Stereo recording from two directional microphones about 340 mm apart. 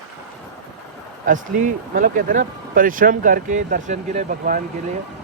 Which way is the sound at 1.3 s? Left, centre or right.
Right.